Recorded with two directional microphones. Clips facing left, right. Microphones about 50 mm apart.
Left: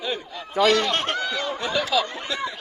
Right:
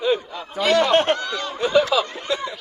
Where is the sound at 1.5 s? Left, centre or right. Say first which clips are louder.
Right 8 dB; centre.